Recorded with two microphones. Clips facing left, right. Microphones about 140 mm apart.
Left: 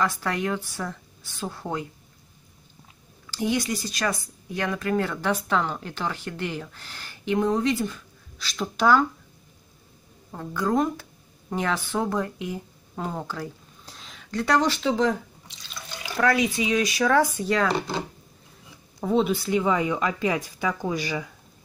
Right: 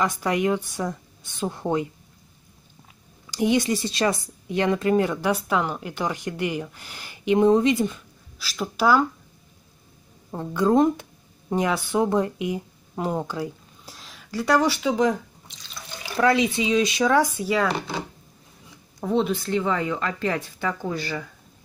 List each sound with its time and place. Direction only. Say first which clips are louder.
0.0 s speech: right 3 dB; 15° right (ahead or behind)
3.3 s speech: right 4 dB; 20° right (ahead or behind)
8.4 s speech: right 1 dB; 5° right (ahead or behind)
10.3 s speech: right 5 dB; 20° right (ahead or behind)
13.9 s speech: even; centre (ahead or behind)
16.2 s speech: right 2 dB; 25° right (ahead or behind)
17.4 s speech: even; 5° right (ahead or behind); by 21.3 s 15° left (ahead or behind)